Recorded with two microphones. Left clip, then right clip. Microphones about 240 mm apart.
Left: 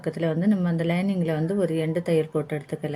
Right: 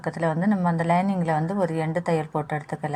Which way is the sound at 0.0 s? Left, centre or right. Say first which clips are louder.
Right 1 dB; right.